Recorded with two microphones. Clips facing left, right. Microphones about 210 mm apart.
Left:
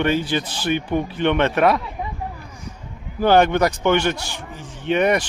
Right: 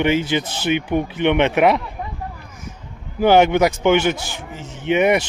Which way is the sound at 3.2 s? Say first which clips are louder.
Right 2 dB; 10° right (ahead or behind).